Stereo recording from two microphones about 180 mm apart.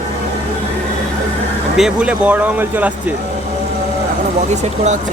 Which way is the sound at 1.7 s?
5° right (ahead or behind).